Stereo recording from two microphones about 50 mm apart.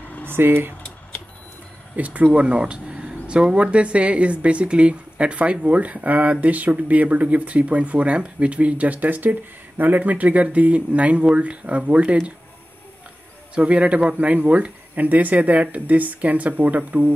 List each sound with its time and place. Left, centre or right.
0.3 s speech: right
2.0 s speech: right
13.6 s speech: right